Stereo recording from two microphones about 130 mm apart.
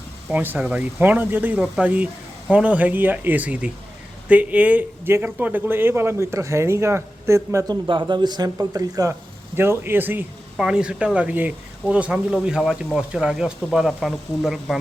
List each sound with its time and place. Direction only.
0.3 s speech: 15° right (ahead or behind)
7.9 s speech: 35° right (ahead or behind); by 14.8 s centre (ahead or behind)